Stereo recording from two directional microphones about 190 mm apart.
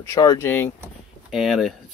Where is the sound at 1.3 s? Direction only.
Centre (ahead or behind).